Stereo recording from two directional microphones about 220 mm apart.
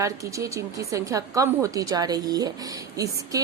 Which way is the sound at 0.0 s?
15° right (ahead or behind).